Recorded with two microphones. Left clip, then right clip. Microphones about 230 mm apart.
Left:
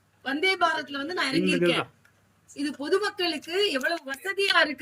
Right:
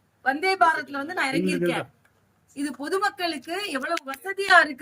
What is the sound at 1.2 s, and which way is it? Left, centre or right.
Speech, centre.